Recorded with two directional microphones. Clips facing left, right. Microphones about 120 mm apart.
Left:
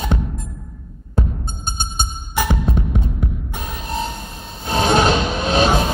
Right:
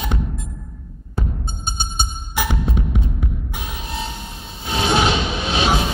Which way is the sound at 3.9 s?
40° left (ahead or behind).